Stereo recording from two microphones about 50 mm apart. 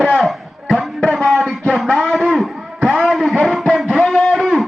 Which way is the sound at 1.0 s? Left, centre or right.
Centre.